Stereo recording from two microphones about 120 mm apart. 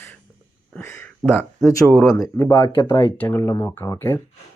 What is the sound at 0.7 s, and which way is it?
Speech, 20° left (ahead or behind).